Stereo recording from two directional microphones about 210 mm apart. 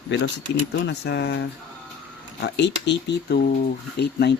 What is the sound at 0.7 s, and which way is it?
Speech, 55° left (ahead or behind).